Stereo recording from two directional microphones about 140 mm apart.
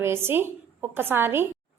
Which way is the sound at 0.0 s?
15° right (ahead or behind).